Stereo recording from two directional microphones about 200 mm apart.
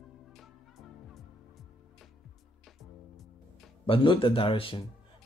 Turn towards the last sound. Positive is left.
turn(degrees=25)  # may be behind; listen again after turning